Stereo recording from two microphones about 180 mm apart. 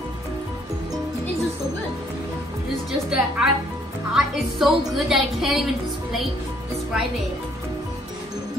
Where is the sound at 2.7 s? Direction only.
5° right (ahead or behind).